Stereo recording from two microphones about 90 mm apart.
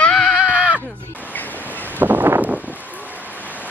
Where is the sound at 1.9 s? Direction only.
20° right (ahead or behind).